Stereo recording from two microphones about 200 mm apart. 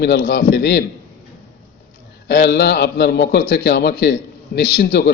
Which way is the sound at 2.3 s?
55° left (ahead or behind).